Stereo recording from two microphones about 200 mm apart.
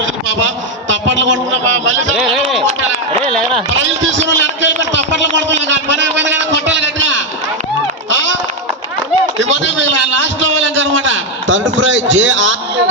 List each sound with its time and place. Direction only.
0.0 s a man's voice: 70° right (ahead or behind)
3.7 s a man's voice: 65° right (ahead or behind)
8.1 s a sound: 70° right (ahead or behind)
9.4 s a man's voice: 65° right (ahead or behind)